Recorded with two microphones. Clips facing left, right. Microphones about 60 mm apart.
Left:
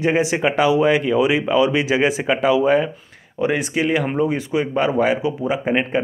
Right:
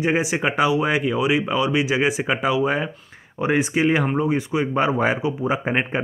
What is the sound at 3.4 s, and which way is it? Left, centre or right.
Speech, right.